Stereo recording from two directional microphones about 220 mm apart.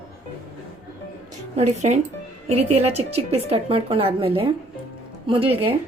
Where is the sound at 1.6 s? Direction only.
30° right (ahead or behind).